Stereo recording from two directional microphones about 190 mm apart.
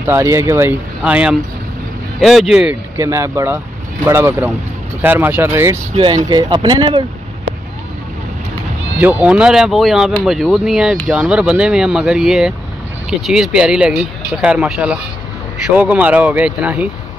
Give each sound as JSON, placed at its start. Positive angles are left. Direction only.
{"t": 0.0, "sound": "speech", "side_deg": -15}
{"t": 5.9, "sound": "speech", "side_deg": -25}
{"t": 8.9, "sound": "speech", "side_deg": -10}